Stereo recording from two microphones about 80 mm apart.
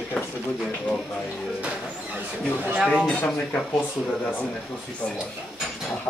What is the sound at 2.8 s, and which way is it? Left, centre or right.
Speech, centre.